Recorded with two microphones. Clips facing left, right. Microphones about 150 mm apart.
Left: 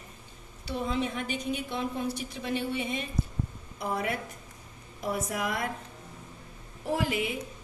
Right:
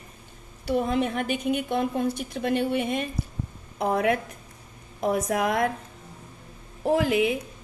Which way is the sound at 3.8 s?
90° right.